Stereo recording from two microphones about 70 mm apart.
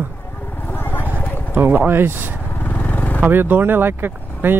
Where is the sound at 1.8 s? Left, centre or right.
Right.